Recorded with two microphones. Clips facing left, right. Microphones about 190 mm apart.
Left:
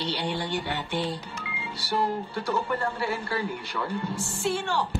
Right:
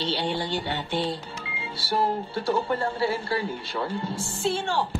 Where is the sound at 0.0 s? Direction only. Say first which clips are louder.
Right 2 dB; 25° right (ahead or behind).